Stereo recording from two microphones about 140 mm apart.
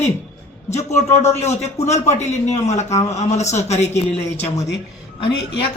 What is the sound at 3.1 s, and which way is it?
Speech, 55° left (ahead or behind).